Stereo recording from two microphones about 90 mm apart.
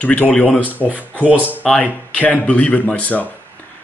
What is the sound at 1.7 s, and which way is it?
Speech, 10° left (ahead or behind).